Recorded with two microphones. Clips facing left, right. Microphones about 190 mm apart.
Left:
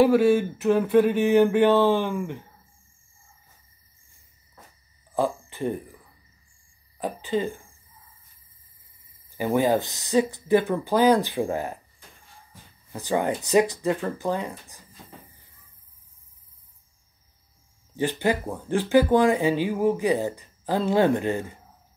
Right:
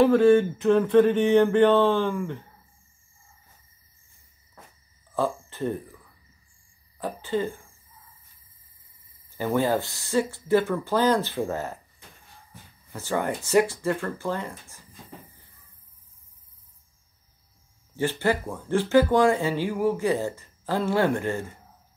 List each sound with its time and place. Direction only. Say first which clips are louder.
0.0 s speech: right 1 dB; 10° left (ahead or behind)
5.1 s speech: left 1 dB; 15° left (ahead or behind)
7.0 s speech: left 1 dB; 15° left (ahead or behind)
9.4 s speech: left 2 dB; 15° left (ahead or behind)
12.9 s speech: left 3 dB; 15° left (ahead or behind)
17.9 s speech: left 1 dB; 15° left (ahead or behind)